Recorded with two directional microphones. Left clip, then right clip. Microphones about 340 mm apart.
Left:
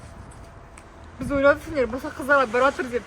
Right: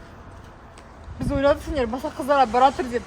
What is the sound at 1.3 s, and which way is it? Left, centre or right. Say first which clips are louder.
Speech: left 1 dB; centre.